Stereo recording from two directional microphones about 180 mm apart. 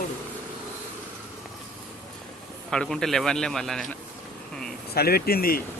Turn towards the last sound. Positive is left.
turn(degrees=55)  # may be behind; listen again after turning